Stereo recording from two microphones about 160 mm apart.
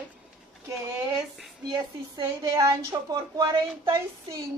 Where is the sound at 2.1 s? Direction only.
20° right (ahead or behind).